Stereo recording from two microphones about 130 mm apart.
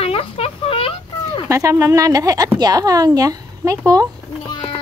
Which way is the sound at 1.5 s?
25° right (ahead or behind).